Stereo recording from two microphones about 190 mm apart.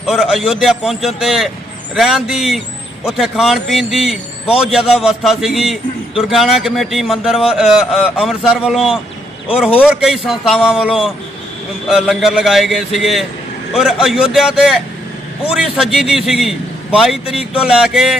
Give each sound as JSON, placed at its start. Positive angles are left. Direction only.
{"t": 0.0, "sound": "a man's voice", "side_deg": 0}